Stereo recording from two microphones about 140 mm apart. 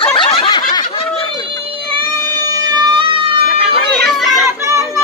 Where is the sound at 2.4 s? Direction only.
25° right (ahead or behind).